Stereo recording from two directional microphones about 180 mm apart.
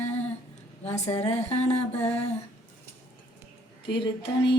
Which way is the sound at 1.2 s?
35° left (ahead or behind).